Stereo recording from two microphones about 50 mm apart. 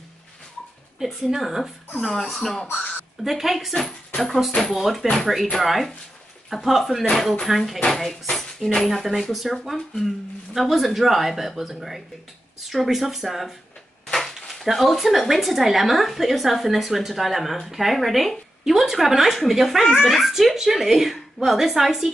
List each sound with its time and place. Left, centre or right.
0.9 s a woman's voice: centre
2.7 s speech: left
3.3 s a woman's voice: centre
14.0 s a sound: centre
14.5 s a woman's voice: centre